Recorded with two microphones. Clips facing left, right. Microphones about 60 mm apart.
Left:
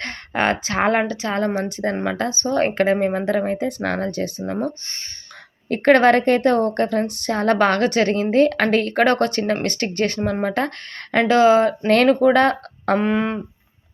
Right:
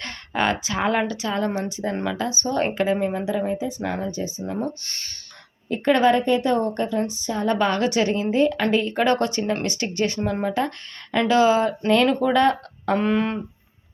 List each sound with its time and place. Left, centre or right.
0.0 s a woman's voice: left
5.6 s a woman's voice: left
12.3 s speech: left
13.0 s a sound: centre